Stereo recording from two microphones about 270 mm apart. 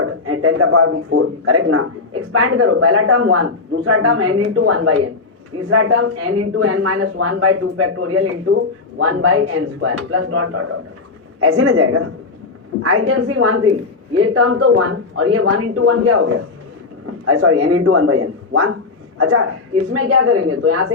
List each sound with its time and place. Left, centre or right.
0.0 s speech: right